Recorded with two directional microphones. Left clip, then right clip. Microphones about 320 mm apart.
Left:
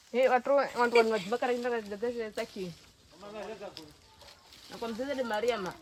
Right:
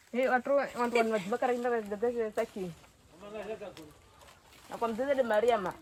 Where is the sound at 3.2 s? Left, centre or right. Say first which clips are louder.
Right 1 dB; centre.